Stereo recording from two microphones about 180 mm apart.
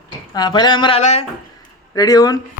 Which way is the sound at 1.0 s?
40° left (ahead or behind).